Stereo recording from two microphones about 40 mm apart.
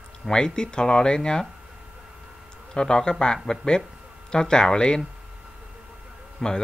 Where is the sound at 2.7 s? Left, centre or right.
Centre.